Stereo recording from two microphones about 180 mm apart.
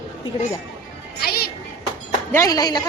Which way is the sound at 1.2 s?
60° left (ahead or behind).